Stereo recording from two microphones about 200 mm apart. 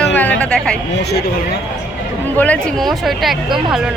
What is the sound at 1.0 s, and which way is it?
Speech, 55° left (ahead or behind).